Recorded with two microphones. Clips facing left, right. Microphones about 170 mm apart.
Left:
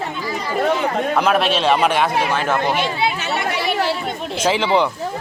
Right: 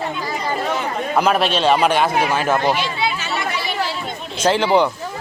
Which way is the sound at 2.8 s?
55° left (ahead or behind).